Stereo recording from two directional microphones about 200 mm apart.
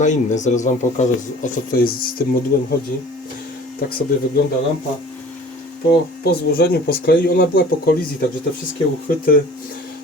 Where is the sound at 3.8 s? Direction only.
50° left (ahead or behind).